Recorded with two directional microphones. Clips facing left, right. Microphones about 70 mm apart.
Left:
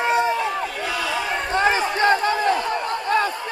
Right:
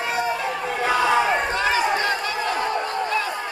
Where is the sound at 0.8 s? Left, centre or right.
Right.